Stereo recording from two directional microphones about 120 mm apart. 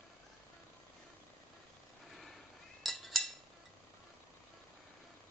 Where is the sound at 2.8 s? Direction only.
Centre (ahead or behind).